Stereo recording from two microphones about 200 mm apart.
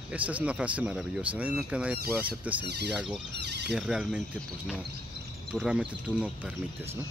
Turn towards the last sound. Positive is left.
turn(degrees=-10)  # may be behind; listen again after turning